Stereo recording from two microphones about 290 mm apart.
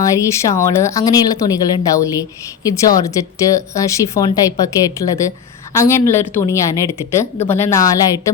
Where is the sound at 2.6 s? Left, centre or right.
Centre.